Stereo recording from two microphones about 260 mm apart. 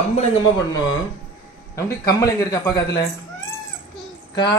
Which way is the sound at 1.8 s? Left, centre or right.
Centre.